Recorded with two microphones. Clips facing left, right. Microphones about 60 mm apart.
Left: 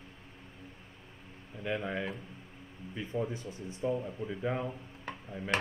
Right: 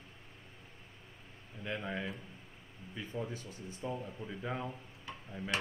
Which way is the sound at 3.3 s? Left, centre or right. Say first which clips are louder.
Left 4 dB; left.